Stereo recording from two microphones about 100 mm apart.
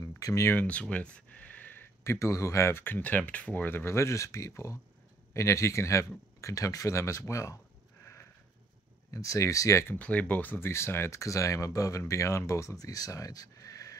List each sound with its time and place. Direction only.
0.2 s speech: 30° left (ahead or behind)
0.6 s speech: 10° left (ahead or behind); by 7.5 s 30° left (ahead or behind)
8.0 s sniff: 25° left (ahead or behind)
9.1 s speech: 35° left (ahead or behind)
9.9 s speech: 15° left (ahead or behind); by 13.9 s 35° left (ahead or behind)